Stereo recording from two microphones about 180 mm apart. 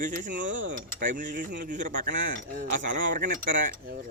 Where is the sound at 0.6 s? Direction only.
90° right.